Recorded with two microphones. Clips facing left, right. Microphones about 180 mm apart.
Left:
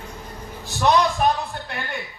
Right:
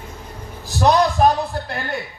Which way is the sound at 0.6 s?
35° right (ahead or behind).